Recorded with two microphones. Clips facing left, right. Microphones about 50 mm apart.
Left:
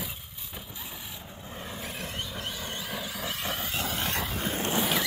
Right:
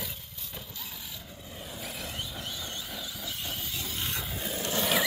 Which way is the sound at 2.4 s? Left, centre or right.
Left.